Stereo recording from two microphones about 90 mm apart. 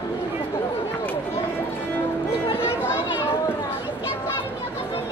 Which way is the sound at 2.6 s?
30° left (ahead or behind).